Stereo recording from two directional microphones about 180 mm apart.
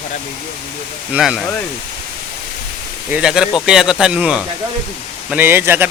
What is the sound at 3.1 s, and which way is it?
A man's voice, 5° right (ahead or behind).